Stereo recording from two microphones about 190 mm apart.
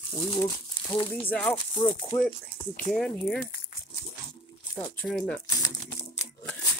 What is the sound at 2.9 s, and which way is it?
Speech, centre (ahead or behind).